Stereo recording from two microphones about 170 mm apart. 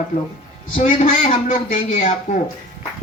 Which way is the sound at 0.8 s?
45° left (ahead or behind).